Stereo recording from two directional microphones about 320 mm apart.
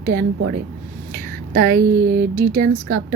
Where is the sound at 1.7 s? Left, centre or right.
Right.